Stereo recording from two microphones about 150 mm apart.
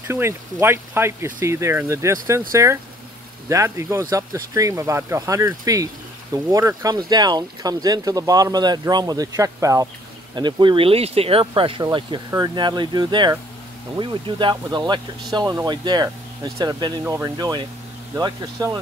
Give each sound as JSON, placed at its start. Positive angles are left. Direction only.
{"t": 0.1, "sound": "speech", "side_deg": -15}